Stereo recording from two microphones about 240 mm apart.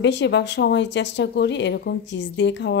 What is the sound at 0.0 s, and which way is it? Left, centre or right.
A woman's voice, left.